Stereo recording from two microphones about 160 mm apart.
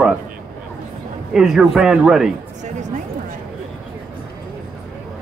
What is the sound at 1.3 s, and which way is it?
Speech, 5° right (ahead or behind).